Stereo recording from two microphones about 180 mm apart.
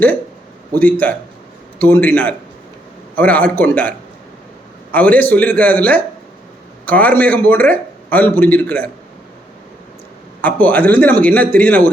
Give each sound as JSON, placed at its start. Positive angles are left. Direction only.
{"t": 0.7, "sound": "speech", "side_deg": 10}
{"t": 10.4, "sound": "speech", "side_deg": 10}